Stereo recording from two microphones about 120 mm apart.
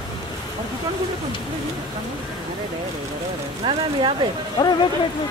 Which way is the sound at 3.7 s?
45° right (ahead or behind).